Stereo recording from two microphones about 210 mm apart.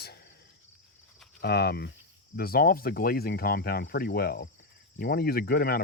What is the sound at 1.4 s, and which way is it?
Speech, 50° left (ahead or behind).